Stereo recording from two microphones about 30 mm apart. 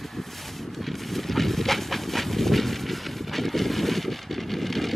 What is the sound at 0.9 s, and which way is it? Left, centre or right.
Train, centre.